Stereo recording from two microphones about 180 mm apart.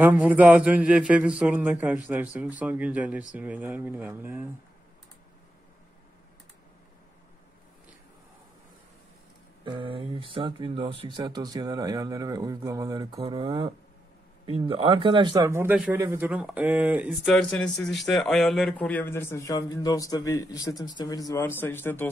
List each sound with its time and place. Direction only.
0.0 s a man's voice: 10° right (ahead or behind)
9.7 s a man's voice: 30° right (ahead or behind); by 17.3 s 5° right (ahead or behind)
17.3 s speech: 5° left (ahead or behind)